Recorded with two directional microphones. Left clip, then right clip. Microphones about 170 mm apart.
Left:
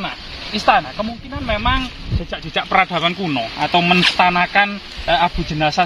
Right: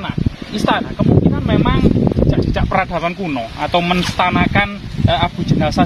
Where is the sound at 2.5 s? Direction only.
40° right (ahead or behind).